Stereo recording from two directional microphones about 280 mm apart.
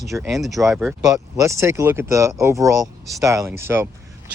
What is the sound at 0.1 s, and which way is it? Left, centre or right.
Speech, centre.